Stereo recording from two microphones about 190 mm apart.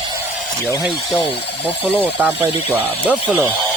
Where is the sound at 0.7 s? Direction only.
15° left (ahead or behind).